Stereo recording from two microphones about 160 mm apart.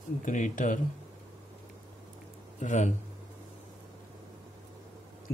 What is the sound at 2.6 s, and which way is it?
Speech, 50° left (ahead or behind).